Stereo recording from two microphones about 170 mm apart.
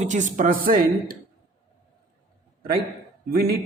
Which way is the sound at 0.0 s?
45° right (ahead or behind).